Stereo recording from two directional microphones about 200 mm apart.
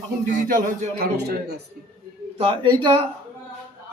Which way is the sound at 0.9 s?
50° right (ahead or behind).